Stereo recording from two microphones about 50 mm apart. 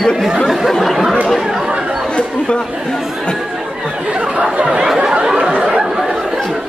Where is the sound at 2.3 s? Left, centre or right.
Centre.